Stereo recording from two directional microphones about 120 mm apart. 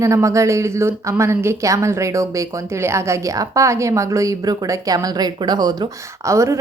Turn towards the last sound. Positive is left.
turn(degrees=-25)  # may be behind; listen again after turning